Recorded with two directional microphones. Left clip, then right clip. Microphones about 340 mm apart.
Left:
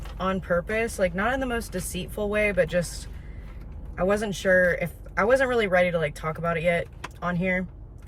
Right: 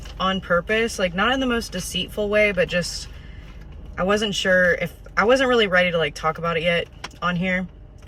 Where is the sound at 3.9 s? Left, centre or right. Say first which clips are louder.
Right 4 dB; centre.